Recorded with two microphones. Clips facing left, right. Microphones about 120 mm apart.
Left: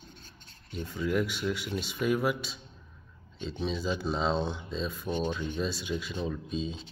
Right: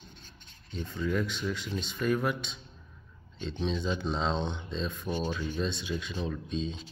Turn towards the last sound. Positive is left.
turn(degrees=5)  # may be behind; listen again after turning